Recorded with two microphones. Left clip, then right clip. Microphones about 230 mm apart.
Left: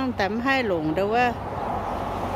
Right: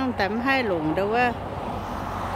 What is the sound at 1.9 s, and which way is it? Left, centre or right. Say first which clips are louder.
Vehicle: left 2 dB; left.